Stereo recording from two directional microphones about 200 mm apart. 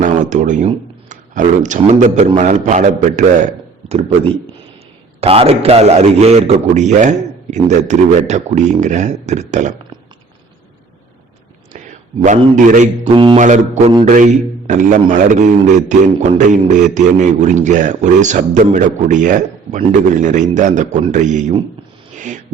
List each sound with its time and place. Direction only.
0.0 s a man's voice: 40° right (ahead or behind)
5.2 s a man's voice: 30° right (ahead or behind)
12.2 s a man's voice: 40° right (ahead or behind)
13.1 s speech: 25° right (ahead or behind)
13.4 s a man's voice: 35° right (ahead or behind)
22.1 s a sound: 40° right (ahead or behind)